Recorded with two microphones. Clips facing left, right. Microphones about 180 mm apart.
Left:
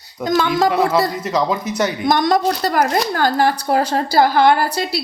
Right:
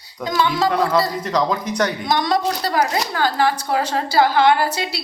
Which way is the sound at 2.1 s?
50° left (ahead or behind).